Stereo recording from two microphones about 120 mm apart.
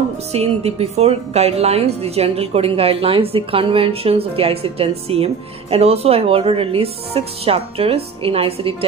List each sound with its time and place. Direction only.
0.3 s a woman's voice: 60° right (ahead or behind)